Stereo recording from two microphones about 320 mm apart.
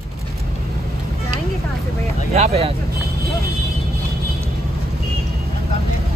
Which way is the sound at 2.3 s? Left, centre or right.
Centre.